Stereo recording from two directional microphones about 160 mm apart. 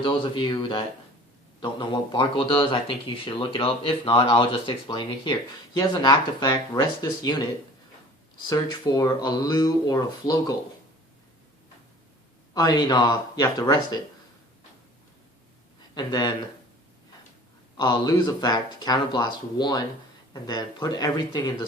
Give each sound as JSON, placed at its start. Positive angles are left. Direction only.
{"t": 0.0, "sound": "speech", "side_deg": 30}
{"t": 8.4, "sound": "speech", "side_deg": 25}
{"t": 12.5, "sound": "speech", "side_deg": 25}
{"t": 16.0, "sound": "speech", "side_deg": 25}
{"t": 17.7, "sound": "speech", "side_deg": 25}